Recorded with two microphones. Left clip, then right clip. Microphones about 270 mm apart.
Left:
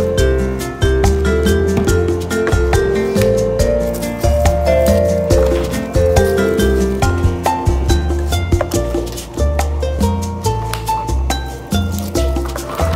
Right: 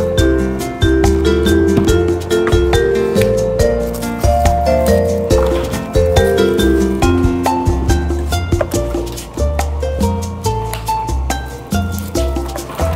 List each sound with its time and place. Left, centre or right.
0.1 s music: centre